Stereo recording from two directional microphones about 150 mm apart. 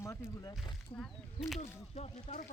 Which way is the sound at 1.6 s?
45° left (ahead or behind).